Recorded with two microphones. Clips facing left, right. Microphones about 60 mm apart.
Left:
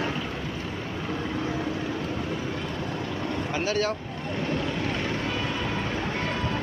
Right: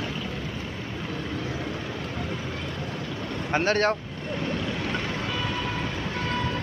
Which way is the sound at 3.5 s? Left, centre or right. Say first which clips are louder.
Right 5 dB; right.